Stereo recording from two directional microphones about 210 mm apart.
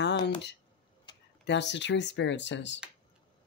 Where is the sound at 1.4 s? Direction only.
55° left (ahead or behind).